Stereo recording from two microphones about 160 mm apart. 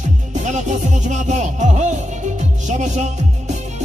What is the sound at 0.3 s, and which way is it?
Music, 50° right (ahead or behind).